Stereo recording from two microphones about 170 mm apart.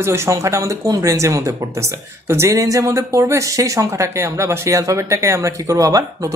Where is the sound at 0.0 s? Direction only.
15° right (ahead or behind).